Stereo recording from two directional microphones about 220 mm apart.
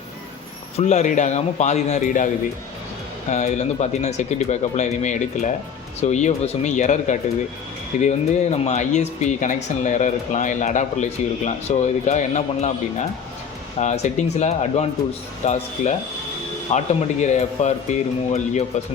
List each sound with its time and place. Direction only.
0.8 s speech: 30° left (ahead or behind)